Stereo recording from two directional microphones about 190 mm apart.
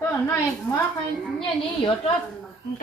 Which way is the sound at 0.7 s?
5° left (ahead or behind).